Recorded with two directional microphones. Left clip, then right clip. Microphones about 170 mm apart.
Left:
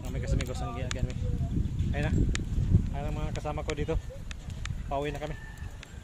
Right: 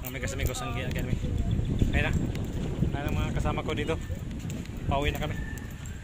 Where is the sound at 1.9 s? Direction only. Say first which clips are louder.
Right 2 dB; 15° right (ahead or behind).